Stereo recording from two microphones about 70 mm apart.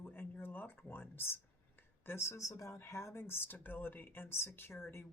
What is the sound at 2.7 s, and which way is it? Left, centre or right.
Speech, left.